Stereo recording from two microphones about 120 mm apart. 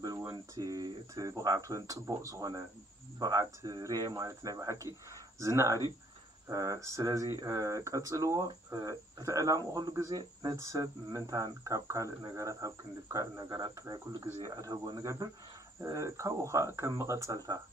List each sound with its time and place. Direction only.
0.6 s speech: 30° right (ahead or behind)